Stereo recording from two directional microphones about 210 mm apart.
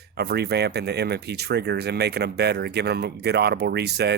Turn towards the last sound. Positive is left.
turn(degrees=-50)  # may be behind; listen again after turning